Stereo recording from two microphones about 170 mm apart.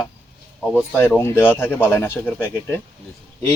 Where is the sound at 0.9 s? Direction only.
10° left (ahead or behind).